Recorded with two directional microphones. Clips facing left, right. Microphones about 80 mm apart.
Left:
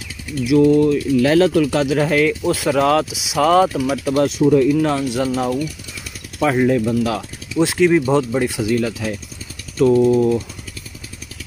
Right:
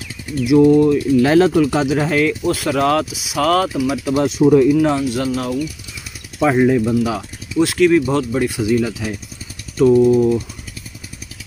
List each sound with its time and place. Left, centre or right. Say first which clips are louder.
0.3 s speech: right 2 dB; right
2.0 s speech: even; centre
2.4 s speech: even; centre
2.7 s speech: left 2 dB; centre
3.6 s speech: even; centre
4.4 s speech: right 4 dB; centre
4.7 s speech: right 2 dB; centre
6.4 s speech: right 2 dB; centre
7.7 s speech: even; centre
8.5 s speech: right 2 dB; centre